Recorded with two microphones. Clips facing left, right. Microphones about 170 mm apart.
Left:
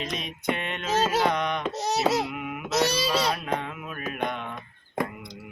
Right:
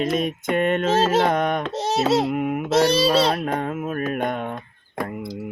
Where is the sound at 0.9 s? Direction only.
30° right (ahead or behind).